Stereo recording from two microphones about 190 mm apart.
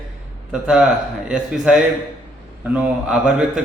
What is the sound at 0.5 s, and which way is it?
A man's voice, 5° right (ahead or behind).